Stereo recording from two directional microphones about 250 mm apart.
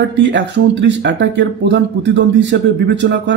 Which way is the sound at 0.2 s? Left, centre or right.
Right.